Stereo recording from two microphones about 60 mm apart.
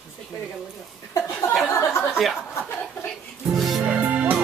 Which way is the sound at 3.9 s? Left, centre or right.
Right.